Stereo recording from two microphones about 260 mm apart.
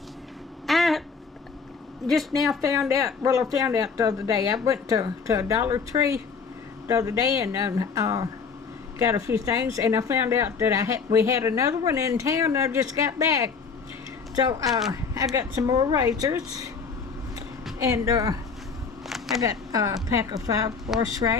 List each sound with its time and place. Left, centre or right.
0.7 s a sound: centre
2.0 s speech: centre
3.2 s a woman's voice: centre
14.7 s speech: centre
15.1 s a woman's voice: centre
17.7 s a woman's voice: centre
19.0 s a sound: centre
19.4 s a woman's voice: centre